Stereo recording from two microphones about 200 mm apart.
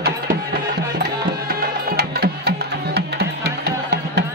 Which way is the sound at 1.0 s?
50° right (ahead or behind).